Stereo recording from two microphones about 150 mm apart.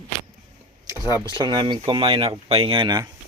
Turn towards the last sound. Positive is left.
turn(degrees=-30)  # may be behind; listen again after turning